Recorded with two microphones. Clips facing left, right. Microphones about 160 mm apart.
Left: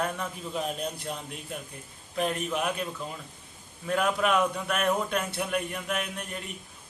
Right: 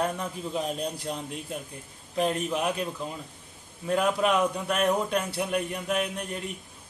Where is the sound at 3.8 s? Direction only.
25° right (ahead or behind).